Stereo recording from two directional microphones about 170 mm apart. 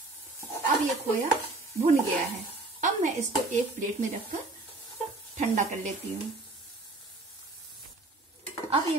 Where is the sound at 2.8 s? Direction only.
45° right (ahead or behind).